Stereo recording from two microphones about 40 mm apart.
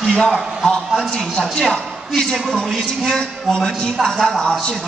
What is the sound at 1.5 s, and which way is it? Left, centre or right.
Speech, centre.